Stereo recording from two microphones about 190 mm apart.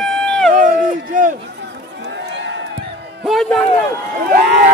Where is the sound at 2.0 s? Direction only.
65° right (ahead or behind).